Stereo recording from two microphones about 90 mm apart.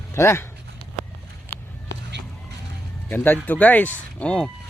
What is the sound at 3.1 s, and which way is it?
Speech, 20° left (ahead or behind).